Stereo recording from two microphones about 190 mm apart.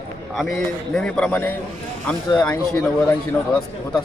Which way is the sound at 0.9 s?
5° left (ahead or behind).